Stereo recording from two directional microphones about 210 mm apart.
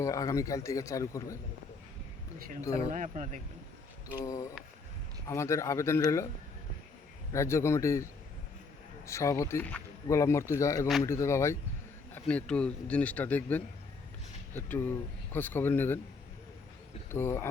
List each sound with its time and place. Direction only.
0.0 s speech: 15° left (ahead or behind)
2.6 s speech: 15° left (ahead or behind)
2.9 s speech: 40° right (ahead or behind)
4.1 s speech: 15° left (ahead or behind)
7.3 s speech: 10° left (ahead or behind)
17.1 s speech: 10° left (ahead or behind)